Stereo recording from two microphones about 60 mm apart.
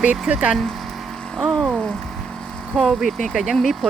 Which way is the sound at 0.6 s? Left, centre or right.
Centre.